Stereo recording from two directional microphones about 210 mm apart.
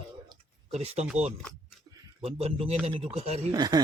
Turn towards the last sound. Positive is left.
turn(degrees=-20)  # may be behind; listen again after turning